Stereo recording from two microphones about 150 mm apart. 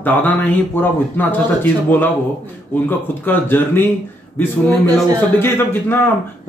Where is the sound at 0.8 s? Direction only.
15° left (ahead or behind).